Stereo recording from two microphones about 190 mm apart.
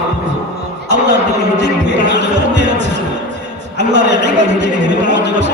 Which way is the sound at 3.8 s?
65° right (ahead or behind).